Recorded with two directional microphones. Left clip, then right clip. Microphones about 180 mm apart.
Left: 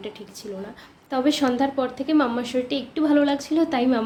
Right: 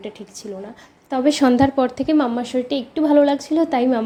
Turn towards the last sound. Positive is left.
turn(degrees=-25)  # may be behind; listen again after turning